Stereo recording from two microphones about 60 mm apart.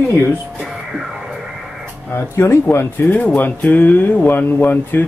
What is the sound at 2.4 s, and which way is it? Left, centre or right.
Speech, left.